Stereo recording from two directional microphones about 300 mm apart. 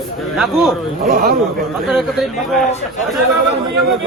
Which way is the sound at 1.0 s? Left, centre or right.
Right.